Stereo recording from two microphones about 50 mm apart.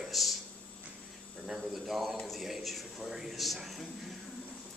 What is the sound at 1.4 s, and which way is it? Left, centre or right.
A man's voice, centre.